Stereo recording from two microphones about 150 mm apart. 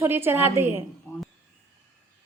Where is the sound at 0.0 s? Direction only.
15° right (ahead or behind).